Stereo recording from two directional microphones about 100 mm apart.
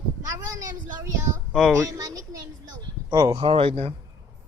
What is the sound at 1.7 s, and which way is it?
Speech, 35° right (ahead or behind).